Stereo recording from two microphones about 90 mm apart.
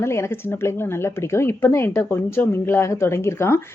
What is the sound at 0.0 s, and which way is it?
Speech, 30° left (ahead or behind).